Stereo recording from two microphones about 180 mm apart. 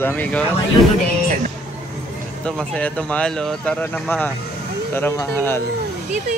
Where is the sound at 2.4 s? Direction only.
5° left (ahead or behind).